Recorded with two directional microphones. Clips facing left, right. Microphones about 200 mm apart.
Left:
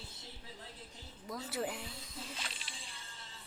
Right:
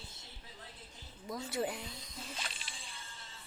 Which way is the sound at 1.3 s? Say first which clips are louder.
Right 2 dB; 5° left (ahead or behind).